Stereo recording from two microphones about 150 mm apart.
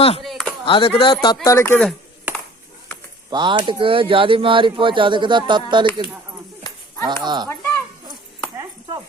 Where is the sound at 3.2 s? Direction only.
30° right (ahead or behind).